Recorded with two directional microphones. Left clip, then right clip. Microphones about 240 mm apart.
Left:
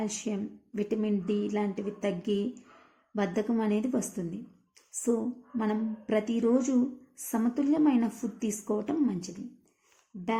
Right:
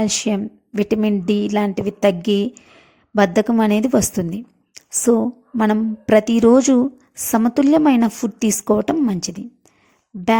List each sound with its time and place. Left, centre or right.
0.0 s speech: right